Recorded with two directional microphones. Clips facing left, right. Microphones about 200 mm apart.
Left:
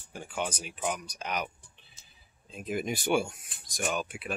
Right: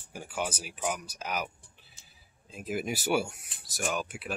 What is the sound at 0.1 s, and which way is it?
Speech, 5° right (ahead or behind).